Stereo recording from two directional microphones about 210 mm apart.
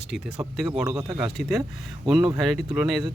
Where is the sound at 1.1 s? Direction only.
Centre (ahead or behind).